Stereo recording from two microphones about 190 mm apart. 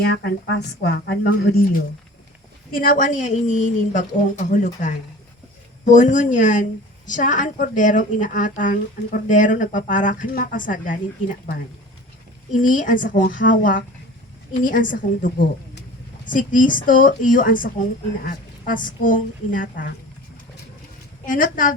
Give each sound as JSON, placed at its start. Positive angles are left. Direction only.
{"t": 0.0, "sound": "speech", "side_deg": 60}
{"t": 2.7, "sound": "a woman's voice", "side_deg": 50}
{"t": 12.5, "sound": "a woman's voice", "side_deg": 45}
{"t": 21.2, "sound": "a woman's voice", "side_deg": 45}